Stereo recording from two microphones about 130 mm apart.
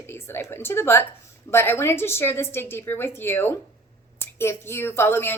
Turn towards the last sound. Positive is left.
turn(degrees=15)  # may be behind; listen again after turning